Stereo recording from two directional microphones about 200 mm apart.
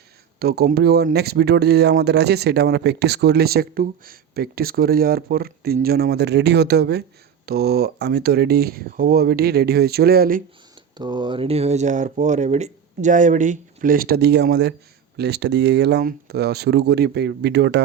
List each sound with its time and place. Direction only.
0.3 s speech: 50° right (ahead or behind)
10.9 s speech: 20° right (ahead or behind); by 17.8 s 60° right (ahead or behind)